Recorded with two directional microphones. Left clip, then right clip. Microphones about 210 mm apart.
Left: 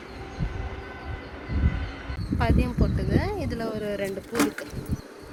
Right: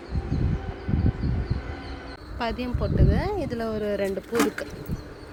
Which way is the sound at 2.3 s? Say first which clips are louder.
Left 2 dB; 25° right (ahead or behind).